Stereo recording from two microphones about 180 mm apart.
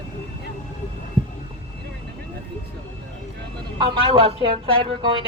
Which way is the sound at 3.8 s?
30° right (ahead or behind).